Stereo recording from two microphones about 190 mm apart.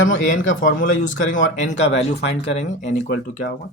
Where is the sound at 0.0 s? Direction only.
85° left.